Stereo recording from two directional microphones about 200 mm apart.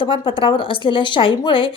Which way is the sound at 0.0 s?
25° left (ahead or behind).